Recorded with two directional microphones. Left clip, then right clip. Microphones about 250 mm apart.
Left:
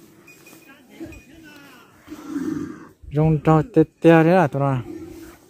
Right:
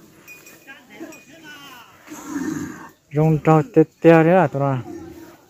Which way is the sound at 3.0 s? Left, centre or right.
Centre.